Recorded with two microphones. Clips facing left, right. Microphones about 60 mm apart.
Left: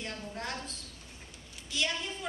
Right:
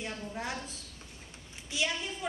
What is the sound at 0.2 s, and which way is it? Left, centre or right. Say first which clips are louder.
A woman's voice: right 1 dB; centre.